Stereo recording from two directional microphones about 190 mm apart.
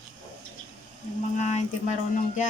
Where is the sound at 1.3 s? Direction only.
40° left (ahead or behind).